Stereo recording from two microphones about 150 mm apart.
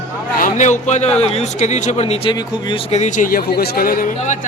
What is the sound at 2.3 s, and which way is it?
Speech, 30° left (ahead or behind).